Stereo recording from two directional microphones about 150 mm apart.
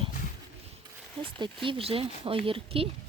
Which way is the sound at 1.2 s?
35° right (ahead or behind).